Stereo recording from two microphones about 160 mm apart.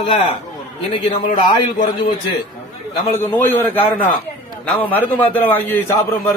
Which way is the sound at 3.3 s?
10° left (ahead or behind).